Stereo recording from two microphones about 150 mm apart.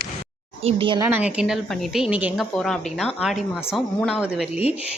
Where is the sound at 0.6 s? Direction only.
35° right (ahead or behind).